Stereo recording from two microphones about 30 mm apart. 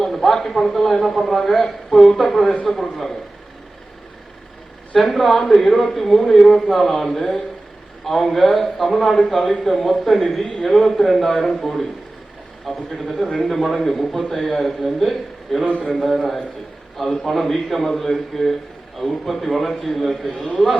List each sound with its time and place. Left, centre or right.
0.0 s a man's voice: centre
4.9 s a man's voice: centre
6.4 s speech: left
6.7 s a man's voice: centre
10.4 s speech: left
10.7 s a man's voice: centre
14.9 s a man's voice: centre